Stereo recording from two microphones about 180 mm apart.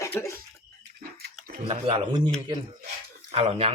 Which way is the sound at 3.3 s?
35° right (ahead or behind).